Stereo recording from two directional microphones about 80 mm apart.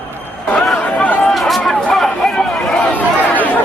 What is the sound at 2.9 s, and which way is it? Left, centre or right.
Chatter, centre.